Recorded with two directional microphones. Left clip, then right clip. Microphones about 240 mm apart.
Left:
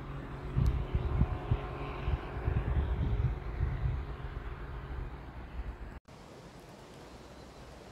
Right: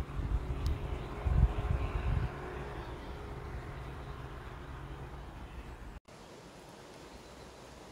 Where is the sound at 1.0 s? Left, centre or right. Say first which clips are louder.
Left 1 dB; left.